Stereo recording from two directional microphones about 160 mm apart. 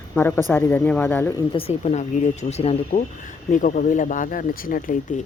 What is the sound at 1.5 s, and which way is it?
Speech, 40° left (ahead or behind).